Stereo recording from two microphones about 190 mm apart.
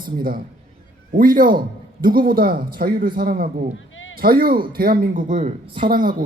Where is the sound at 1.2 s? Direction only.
45° right (ahead or behind).